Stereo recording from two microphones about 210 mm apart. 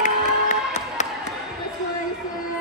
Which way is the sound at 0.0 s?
35° left (ahead or behind).